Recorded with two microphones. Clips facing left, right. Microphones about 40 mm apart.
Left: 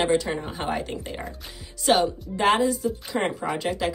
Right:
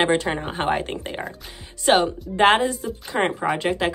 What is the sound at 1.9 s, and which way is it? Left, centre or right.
Speech, right.